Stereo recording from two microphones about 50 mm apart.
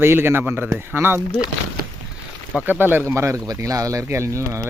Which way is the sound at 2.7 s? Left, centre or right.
Right.